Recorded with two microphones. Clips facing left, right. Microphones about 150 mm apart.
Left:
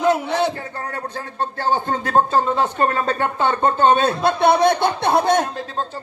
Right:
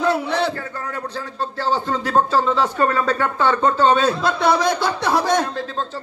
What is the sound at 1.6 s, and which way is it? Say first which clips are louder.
Speech: even; 55° left (ahead or behind).